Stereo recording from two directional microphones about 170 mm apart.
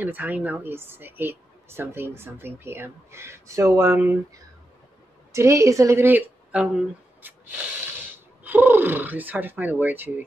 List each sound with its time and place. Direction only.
0.0 s a woman's voice: 10° right (ahead or behind)
5.3 s a woman's voice: 15° right (ahead or behind)
7.2 s spray: 10° right (ahead or behind)
8.5 s a woman's voice: 10° right (ahead or behind)